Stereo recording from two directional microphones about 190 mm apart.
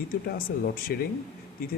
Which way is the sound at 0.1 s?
50° left (ahead or behind).